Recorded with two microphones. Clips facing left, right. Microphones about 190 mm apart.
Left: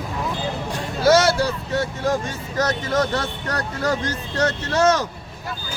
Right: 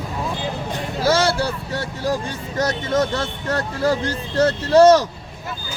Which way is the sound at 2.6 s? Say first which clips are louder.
Right 1 dB; 25° right (ahead or behind).